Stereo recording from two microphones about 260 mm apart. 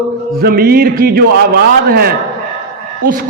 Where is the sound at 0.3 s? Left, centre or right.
Right.